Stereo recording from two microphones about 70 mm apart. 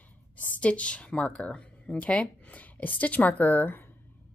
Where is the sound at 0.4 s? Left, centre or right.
Centre.